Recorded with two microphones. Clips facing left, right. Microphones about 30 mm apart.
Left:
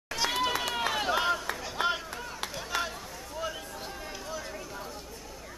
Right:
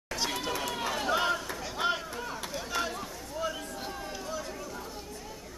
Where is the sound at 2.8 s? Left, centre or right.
Centre.